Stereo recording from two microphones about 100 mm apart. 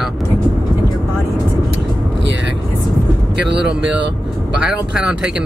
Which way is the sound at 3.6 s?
10° right (ahead or behind).